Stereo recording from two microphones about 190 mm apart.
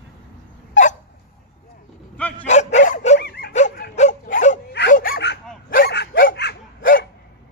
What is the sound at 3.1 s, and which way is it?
Dog, 60° left (ahead or behind).